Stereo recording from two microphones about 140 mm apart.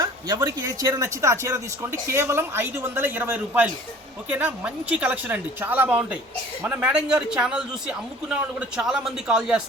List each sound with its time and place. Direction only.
0.0 s a man's voice: 30° right (ahead or behind); by 9.6 s 5° right (ahead or behind)